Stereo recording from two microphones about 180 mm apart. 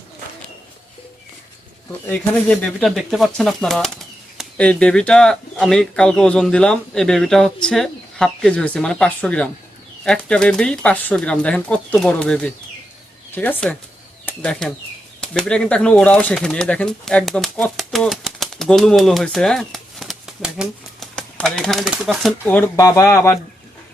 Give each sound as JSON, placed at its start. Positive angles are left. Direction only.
{"t": 2.0, "sound": "speech", "side_deg": 10}